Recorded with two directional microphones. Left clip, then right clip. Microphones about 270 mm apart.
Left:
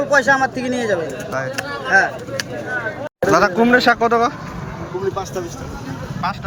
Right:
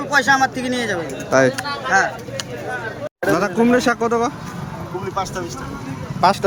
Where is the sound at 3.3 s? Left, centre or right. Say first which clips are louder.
Left 4 dB; centre.